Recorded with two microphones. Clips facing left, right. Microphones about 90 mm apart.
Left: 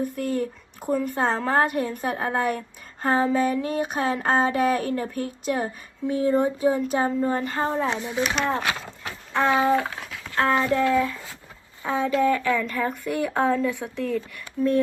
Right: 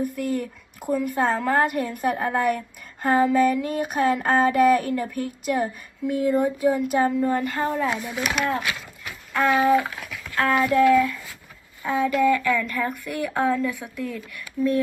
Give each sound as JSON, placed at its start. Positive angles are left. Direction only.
{"t": 0.2, "sound": "a woman's voice", "side_deg": 40}